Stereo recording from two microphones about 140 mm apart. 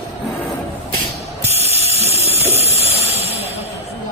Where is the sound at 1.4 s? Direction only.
50° right (ahead or behind).